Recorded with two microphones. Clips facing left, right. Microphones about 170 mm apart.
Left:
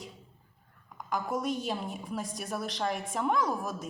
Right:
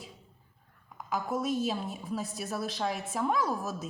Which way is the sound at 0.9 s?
5° right (ahead or behind).